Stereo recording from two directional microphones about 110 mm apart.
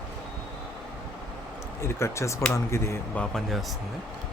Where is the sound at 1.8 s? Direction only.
25° left (ahead or behind).